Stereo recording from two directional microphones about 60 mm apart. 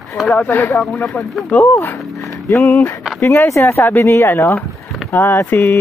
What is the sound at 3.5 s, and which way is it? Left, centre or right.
Speech, left.